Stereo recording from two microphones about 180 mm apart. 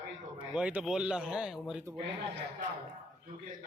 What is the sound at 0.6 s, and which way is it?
Speech, 5° right (ahead or behind).